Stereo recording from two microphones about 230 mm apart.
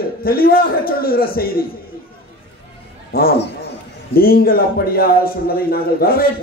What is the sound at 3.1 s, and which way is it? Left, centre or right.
A man's voice, left.